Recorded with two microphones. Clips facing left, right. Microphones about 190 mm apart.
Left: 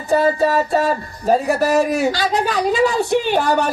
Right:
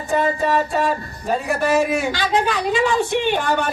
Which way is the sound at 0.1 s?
35° left (ahead or behind).